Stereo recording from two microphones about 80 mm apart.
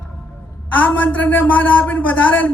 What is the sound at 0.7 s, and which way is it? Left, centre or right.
A man's voice, left.